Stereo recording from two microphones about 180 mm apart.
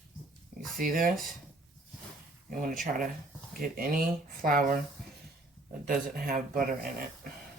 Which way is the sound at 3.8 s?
55° right (ahead or behind).